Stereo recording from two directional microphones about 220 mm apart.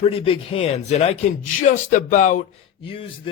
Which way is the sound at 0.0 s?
25° left (ahead or behind).